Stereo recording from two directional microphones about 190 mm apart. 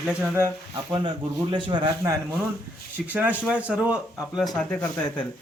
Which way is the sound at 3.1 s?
10° right (ahead or behind).